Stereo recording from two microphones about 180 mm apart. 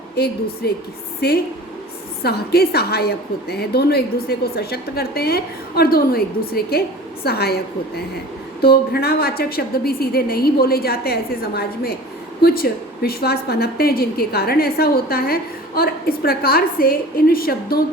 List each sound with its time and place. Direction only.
0.6 s a woman's voice: 60° left (ahead or behind)